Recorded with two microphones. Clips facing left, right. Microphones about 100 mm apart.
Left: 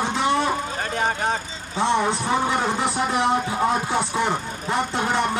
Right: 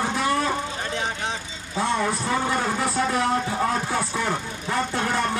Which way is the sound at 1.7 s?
25° left (ahead or behind).